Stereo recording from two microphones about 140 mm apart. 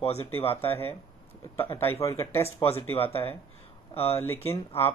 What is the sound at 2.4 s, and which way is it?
Speech, 45° left (ahead or behind).